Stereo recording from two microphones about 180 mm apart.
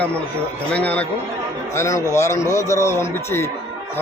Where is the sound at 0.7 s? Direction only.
10° left (ahead or behind).